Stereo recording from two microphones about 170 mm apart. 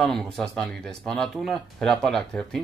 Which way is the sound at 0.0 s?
Centre (ahead or behind).